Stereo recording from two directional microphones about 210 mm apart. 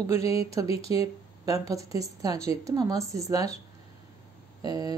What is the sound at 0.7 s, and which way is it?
Speech, 25° left (ahead or behind).